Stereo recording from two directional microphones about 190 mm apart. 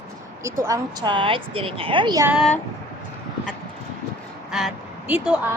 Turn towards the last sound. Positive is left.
turn(degrees=-5)  # may be behind; listen again after turning